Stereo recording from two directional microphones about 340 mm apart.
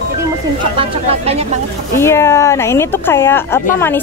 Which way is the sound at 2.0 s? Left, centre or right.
Centre.